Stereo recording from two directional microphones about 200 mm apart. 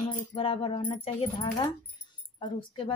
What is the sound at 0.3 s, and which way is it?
A woman's voice, 25° left (ahead or behind).